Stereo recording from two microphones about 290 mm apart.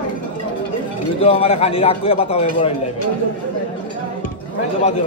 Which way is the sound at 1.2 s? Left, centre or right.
Centre.